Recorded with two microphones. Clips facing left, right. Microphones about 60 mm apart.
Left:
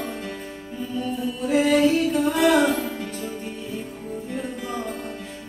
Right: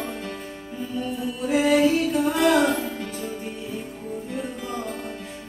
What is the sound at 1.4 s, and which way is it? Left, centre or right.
Music, centre.